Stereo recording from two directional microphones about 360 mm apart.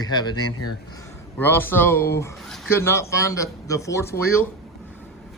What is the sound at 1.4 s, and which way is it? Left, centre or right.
Speech, centre.